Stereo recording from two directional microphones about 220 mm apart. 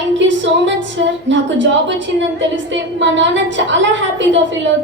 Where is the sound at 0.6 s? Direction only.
55° right (ahead or behind).